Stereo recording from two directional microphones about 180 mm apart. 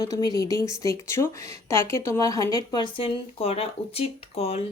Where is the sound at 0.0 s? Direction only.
20° left (ahead or behind).